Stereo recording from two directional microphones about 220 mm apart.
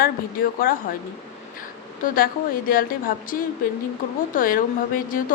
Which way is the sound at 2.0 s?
40° left (ahead or behind).